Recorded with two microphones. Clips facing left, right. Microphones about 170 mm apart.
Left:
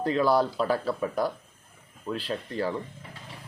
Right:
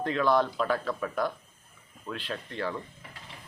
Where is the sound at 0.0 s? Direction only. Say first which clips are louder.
Left 2 dB; 35° left (ahead or behind).